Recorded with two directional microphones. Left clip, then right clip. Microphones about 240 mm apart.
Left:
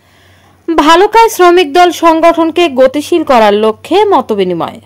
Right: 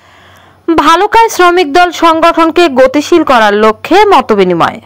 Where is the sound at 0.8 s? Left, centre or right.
Centre.